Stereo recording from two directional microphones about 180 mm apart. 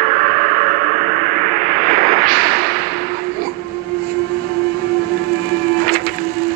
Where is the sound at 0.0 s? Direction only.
45° right (ahead or behind).